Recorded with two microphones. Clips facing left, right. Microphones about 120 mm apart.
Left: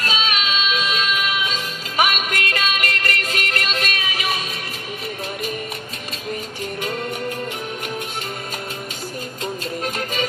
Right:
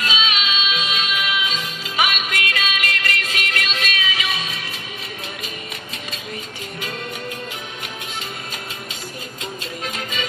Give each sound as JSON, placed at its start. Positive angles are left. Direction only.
{"t": 0.0, "sound": "music", "side_deg": 45}